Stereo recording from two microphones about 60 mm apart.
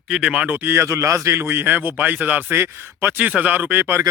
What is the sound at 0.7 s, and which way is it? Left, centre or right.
A man's voice, right.